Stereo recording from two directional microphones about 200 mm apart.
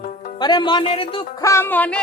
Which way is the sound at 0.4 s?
20° left (ahead or behind).